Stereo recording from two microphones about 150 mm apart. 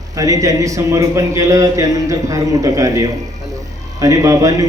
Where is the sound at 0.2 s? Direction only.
25° right (ahead or behind).